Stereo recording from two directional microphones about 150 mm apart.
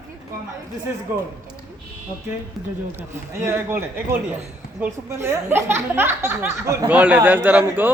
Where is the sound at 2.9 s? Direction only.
15° right (ahead or behind).